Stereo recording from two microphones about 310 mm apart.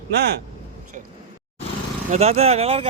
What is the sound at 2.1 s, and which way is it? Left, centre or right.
Speech, right.